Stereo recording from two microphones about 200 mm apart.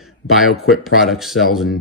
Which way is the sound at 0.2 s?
70° left (ahead or behind).